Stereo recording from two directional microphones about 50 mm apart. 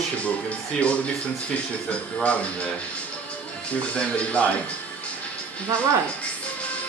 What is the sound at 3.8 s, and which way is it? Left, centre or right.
Speech, left.